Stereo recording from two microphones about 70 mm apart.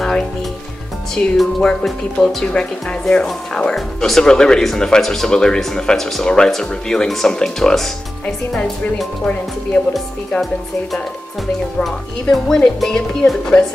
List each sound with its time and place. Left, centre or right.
1.1 s speech: centre
9.2 s speech: centre
11.8 s speech: centre